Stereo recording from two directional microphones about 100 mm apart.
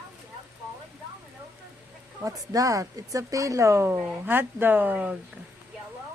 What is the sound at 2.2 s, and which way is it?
Speech, 35° right (ahead or behind).